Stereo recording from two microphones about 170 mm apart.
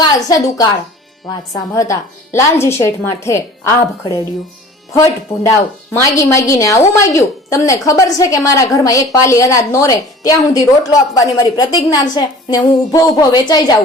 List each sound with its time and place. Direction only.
0.0 s a woman's voice: 20° left (ahead or behind)
1.7 s speech: 20° left (ahead or behind)
4.9 s a woman's voice: 20° left (ahead or behind)